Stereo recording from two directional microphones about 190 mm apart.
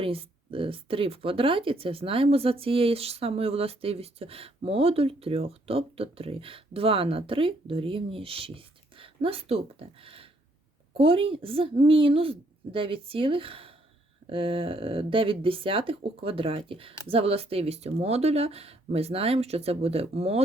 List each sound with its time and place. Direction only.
0.0 s speech: 30° right (ahead or behind)